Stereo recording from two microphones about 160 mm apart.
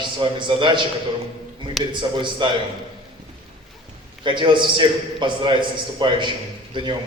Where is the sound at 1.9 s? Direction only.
30° right (ahead or behind).